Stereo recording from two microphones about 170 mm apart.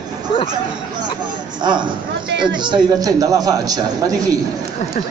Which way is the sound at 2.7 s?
20° right (ahead or behind).